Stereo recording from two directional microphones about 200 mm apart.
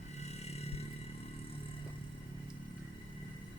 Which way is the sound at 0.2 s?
35° left (ahead or behind).